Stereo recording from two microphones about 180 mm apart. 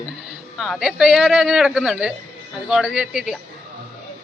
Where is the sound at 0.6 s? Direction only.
Centre (ahead or behind).